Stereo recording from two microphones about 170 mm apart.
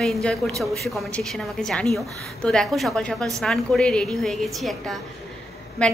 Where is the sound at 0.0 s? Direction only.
5° left (ahead or behind).